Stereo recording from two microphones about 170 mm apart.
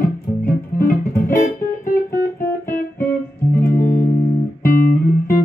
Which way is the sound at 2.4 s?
15° left (ahead or behind).